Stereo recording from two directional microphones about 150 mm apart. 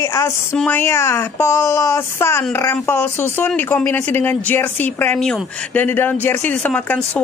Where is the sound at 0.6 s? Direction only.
15° left (ahead or behind).